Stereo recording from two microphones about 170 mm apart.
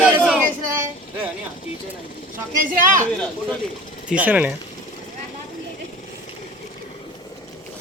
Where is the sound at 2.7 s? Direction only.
50° right (ahead or behind).